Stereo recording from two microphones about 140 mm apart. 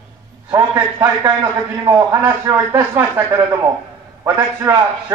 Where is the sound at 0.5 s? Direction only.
20° right (ahead or behind).